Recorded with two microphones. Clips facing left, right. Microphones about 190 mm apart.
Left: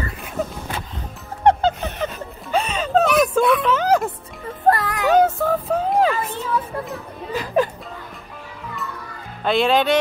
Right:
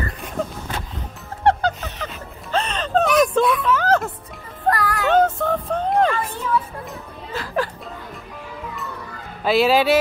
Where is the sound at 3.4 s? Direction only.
60° left (ahead or behind).